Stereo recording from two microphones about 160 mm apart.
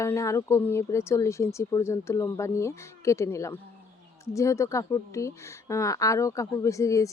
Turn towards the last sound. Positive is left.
turn(degrees=20)  # may be behind; listen again after turning